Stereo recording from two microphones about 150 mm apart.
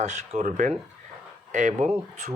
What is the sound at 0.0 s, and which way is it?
Speech, 55° right (ahead or behind).